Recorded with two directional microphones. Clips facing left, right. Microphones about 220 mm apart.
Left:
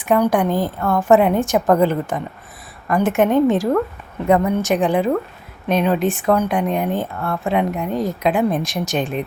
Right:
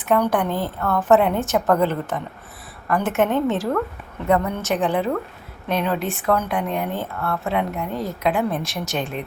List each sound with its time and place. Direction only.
0.0 s speech: 10° left (ahead or behind)